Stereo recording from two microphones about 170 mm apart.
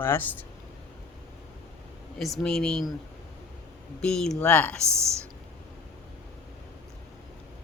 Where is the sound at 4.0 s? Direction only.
5° left (ahead or behind).